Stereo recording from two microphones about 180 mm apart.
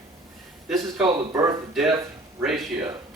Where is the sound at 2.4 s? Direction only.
Centre (ahead or behind).